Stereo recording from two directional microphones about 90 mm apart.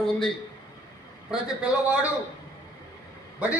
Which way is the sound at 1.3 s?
10° right (ahead or behind).